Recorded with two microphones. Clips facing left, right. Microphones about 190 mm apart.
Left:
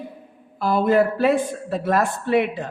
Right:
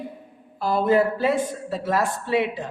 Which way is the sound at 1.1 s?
60° left (ahead or behind).